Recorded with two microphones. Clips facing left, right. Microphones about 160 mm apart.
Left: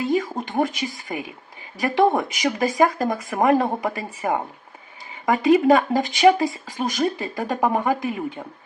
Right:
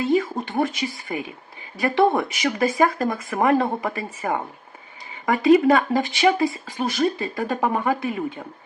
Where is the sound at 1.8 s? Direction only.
15° left (ahead or behind).